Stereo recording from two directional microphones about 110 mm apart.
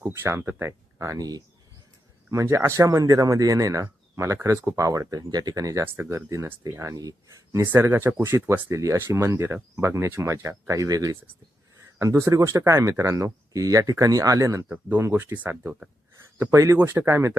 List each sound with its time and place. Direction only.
0.0 s speech: 25° right (ahead or behind)
14.7 s speech: 15° right (ahead or behind)
16.4 s speech: 25° right (ahead or behind)